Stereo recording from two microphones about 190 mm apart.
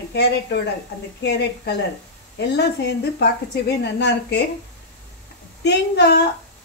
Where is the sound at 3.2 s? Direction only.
60° left (ahead or behind).